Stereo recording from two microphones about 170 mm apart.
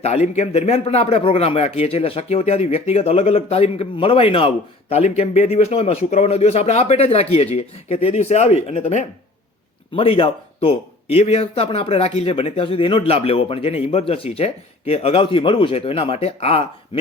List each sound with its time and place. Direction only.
0.0 s speech: 40° left (ahead or behind)